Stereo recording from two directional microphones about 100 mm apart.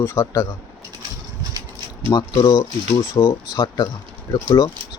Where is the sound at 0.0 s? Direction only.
25° left (ahead or behind).